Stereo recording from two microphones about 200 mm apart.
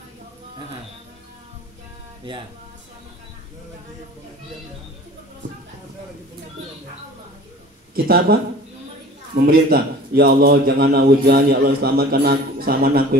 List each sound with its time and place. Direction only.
7.9 s a man's voice: 50° right (ahead or behind)